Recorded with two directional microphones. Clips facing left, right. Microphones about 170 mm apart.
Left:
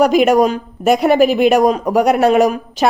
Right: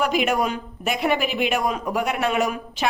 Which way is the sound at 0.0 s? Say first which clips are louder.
Left 10 dB; 40° left (ahead or behind).